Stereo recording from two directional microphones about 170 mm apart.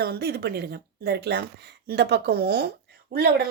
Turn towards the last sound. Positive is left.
turn(degrees=-70)  # may be behind; listen again after turning